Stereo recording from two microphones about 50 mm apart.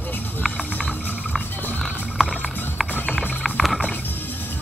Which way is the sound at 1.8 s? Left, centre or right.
Centre.